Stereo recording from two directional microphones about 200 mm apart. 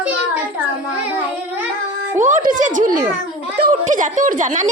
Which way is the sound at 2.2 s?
40° right (ahead or behind).